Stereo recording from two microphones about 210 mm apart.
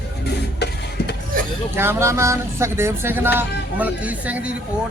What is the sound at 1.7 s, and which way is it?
Speech, 10° right (ahead or behind).